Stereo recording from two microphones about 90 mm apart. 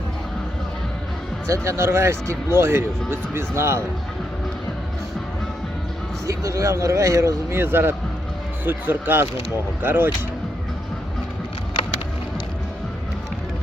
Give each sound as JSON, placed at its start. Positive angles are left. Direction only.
{"t": 1.5, "sound": "speech", "side_deg": -35}
{"t": 6.2, "sound": "speech", "side_deg": -35}